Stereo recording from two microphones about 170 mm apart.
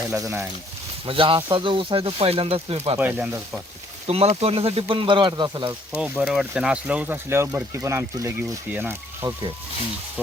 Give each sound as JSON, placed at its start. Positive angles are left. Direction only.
{"t": 0.1, "sound": "speech", "side_deg": -15}
{"t": 1.0, "sound": "speech", "side_deg": -30}
{"t": 3.0, "sound": "speech", "side_deg": -10}
{"t": 4.0, "sound": "speech", "side_deg": -35}
{"t": 6.0, "sound": "speech", "side_deg": -5}
{"t": 9.2, "sound": "speech", "side_deg": -30}